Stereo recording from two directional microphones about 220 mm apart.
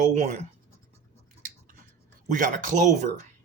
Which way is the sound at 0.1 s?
30° right (ahead or behind).